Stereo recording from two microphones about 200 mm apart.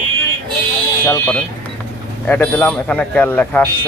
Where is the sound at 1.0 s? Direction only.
10° left (ahead or behind).